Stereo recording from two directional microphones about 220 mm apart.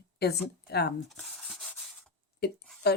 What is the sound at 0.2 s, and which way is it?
Speech, 45° left (ahead or behind).